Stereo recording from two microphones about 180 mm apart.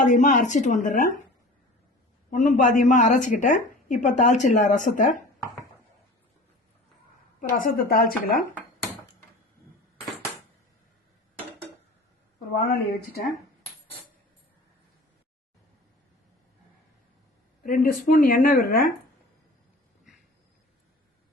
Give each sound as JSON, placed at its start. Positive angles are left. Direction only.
{"t": 0.0, "sound": "a woman's voice", "side_deg": 45}
{"t": 2.3, "sound": "a woman's voice", "side_deg": 45}
{"t": 7.5, "sound": "a woman's voice", "side_deg": 50}
{"t": 12.6, "sound": "speech", "side_deg": 60}
{"t": 17.6, "sound": "a woman's voice", "side_deg": 50}